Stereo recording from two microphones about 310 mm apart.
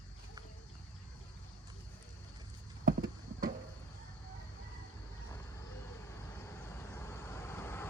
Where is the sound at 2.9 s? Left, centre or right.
Right.